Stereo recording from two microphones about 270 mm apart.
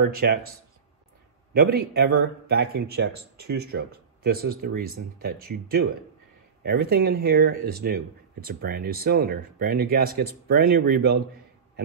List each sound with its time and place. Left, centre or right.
0.0 s speech: right
1.5 s speech: right